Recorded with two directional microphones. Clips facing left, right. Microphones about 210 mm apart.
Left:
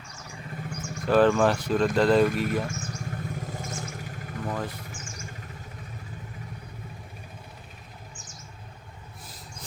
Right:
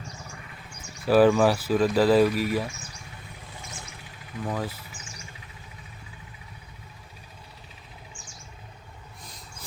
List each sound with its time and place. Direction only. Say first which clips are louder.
1.0 s speech: right 2 dB; 5° right (ahead or behind)
2.7 s vehicle: left 10 dB; 45° left (ahead or behind)
4.4 s speech: right 2 dB; 5° right (ahead or behind)
5.1 s a sound: left 5 dB; 45° left (ahead or behind)